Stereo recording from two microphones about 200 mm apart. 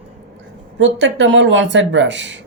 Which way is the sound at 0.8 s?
65° right (ahead or behind).